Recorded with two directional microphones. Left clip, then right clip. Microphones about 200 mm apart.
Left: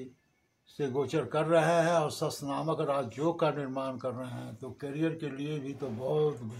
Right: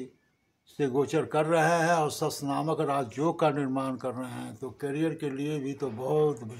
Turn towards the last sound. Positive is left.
turn(degrees=-30)  # may be behind; listen again after turning